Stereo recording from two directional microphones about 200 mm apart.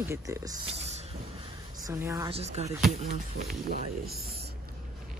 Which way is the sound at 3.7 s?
50° right (ahead or behind).